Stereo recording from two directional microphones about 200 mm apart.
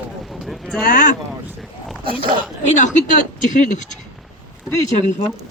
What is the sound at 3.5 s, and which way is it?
Speech, 40° left (ahead or behind).